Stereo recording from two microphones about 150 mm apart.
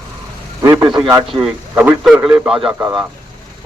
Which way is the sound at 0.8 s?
5° right (ahead or behind).